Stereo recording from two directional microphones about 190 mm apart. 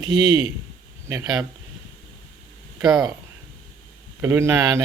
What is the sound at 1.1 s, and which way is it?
Speech, 20° right (ahead or behind).